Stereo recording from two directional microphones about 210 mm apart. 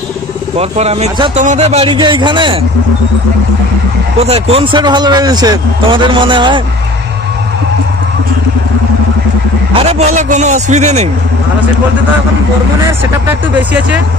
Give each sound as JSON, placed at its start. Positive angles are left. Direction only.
{"t": 0.6, "sound": "speech", "side_deg": -30}
{"t": 4.2, "sound": "speech", "side_deg": -30}
{"t": 9.8, "sound": "a man's voice", "side_deg": -30}
{"t": 13.0, "sound": "speech", "side_deg": -10}